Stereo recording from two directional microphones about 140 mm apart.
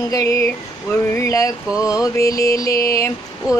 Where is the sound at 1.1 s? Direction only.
20° left (ahead or behind).